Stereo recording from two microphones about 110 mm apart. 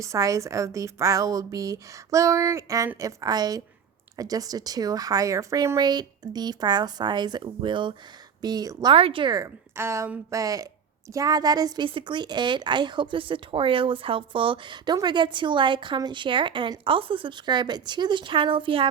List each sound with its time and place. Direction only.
0.0 s a woman's voice: 30° right (ahead or behind)
8.9 s a woman's voice: 55° right (ahead or behind)
9.3 s a woman's voice: 25° right (ahead or behind)
11.9 s a woman's voice: 50° right (ahead or behind)